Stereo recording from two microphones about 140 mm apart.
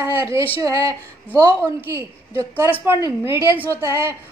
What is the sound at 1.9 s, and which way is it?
A woman's voice, 20° right (ahead or behind).